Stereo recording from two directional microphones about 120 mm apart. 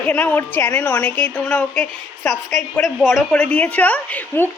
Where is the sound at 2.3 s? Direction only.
Centre (ahead or behind).